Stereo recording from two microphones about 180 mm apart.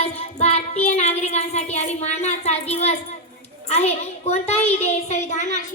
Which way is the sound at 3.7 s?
35° left (ahead or behind).